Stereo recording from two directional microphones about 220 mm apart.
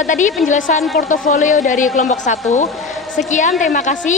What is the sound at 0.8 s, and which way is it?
Music, centre (ahead or behind).